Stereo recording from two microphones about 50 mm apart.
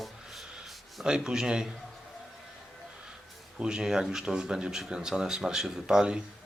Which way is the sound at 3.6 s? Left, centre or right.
Centre.